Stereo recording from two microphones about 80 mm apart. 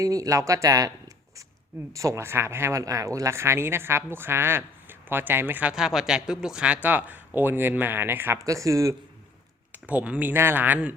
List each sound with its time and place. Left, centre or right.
0.0 s speech: right
5.7 s speech: centre; by 8.4 s right
8.4 s speech: right
9.7 s speech: centre